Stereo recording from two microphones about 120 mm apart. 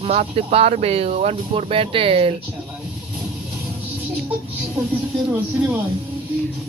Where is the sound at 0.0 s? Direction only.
60° right (ahead or behind).